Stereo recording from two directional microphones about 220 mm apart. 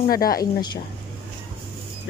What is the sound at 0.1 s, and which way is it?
Speech, 40° left (ahead or behind).